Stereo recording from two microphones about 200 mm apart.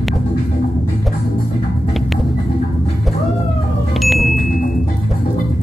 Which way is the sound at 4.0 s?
Centre (ahead or behind).